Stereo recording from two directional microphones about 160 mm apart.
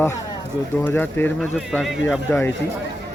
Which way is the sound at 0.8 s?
10° left (ahead or behind).